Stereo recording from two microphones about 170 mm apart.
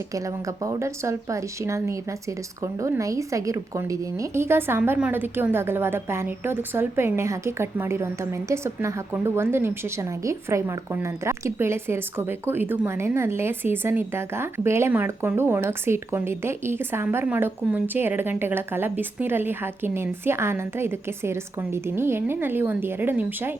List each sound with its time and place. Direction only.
0.1 s a woman's voice: 20° right (ahead or behind)